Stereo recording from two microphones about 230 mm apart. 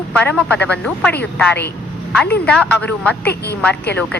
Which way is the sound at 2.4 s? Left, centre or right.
Centre.